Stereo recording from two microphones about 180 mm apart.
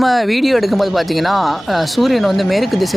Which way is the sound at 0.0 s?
Centre (ahead or behind).